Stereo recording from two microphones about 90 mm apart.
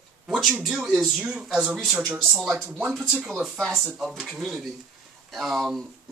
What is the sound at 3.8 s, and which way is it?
Speech, 5° right (ahead or behind).